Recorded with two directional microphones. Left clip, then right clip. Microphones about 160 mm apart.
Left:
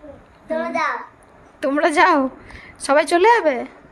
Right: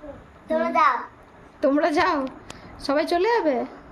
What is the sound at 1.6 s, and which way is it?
A woman's voice, 60° left (ahead or behind).